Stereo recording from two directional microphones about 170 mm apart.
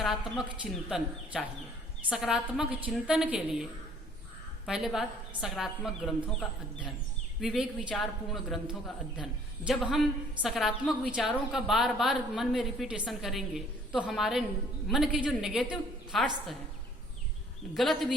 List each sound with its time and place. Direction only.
0.0 s a woman's voice: centre (ahead or behind)
7.4 s a woman's voice: 5° right (ahead or behind)
9.6 s a woman's voice: centre (ahead or behind)
17.7 s a woman's voice: centre (ahead or behind)